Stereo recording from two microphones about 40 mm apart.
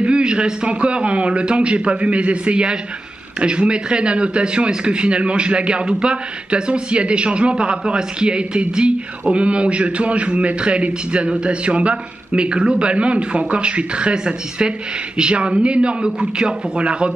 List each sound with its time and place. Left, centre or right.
0.0 s speech: right